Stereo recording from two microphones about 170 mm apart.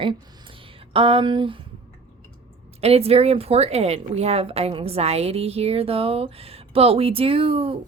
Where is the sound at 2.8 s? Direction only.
35° right (ahead or behind).